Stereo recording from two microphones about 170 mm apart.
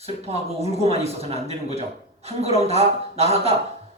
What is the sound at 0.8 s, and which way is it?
A man's voice, 35° right (ahead or behind).